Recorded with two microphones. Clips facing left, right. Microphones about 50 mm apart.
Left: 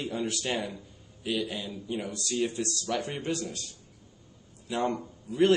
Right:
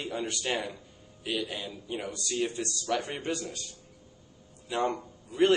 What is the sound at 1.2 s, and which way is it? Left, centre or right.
Speech, centre.